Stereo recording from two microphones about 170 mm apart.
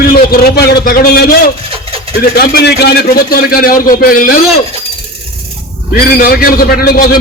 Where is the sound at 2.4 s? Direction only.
70° left (ahead or behind).